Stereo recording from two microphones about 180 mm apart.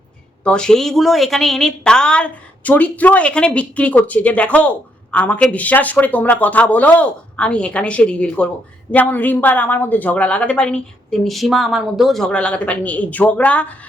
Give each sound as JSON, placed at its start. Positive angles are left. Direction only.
{"t": 0.4, "sound": "speech", "side_deg": 5}